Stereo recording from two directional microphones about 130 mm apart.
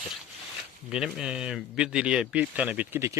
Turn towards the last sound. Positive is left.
turn(degrees=-20)  # may be behind; listen again after turning